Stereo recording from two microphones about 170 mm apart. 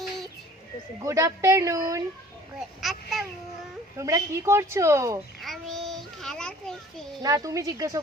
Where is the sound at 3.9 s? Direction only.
20° right (ahead or behind).